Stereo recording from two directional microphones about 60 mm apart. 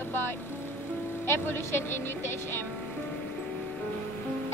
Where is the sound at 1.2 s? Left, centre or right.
Left.